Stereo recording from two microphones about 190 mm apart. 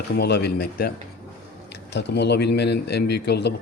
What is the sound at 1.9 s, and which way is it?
Speech, 65° left (ahead or behind).